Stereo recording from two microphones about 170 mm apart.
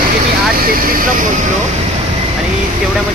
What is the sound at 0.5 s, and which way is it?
Speech, 55° right (ahead or behind).